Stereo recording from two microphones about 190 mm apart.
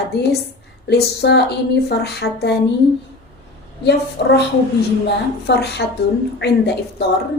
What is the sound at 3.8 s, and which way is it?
Speech, 60° left (ahead or behind).